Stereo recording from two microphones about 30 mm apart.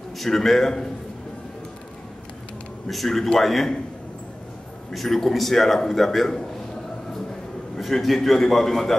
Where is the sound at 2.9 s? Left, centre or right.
Centre.